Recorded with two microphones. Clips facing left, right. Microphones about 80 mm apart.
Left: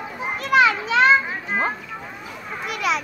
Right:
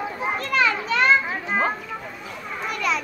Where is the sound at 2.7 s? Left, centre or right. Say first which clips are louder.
Left 2 dB; centre.